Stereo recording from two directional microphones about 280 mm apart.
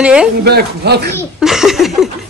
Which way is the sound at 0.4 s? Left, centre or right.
Right.